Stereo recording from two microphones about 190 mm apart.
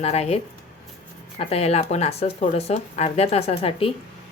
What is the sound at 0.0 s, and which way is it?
Speech, 35° left (ahead or behind).